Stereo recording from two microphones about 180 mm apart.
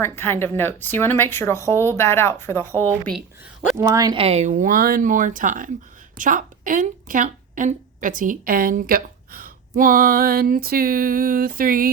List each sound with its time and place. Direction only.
0.0 s speech: 15° left (ahead or behind)
3.0 s speech: centre (ahead or behind)
3.8 s speech: 20° right (ahead or behind)
4.2 s a woman's voice: 35° right (ahead or behind); by 11.9 s 55° right (ahead or behind)